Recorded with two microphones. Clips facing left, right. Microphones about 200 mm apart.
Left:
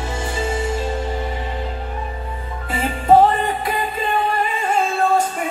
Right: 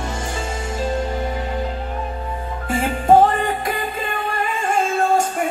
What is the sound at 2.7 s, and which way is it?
Music, 45° right (ahead or behind).